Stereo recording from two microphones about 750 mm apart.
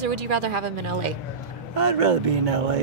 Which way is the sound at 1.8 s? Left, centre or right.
Right.